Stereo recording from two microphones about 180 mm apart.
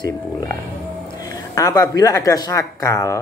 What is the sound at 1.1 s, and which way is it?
A woman's voice, 20° left (ahead or behind).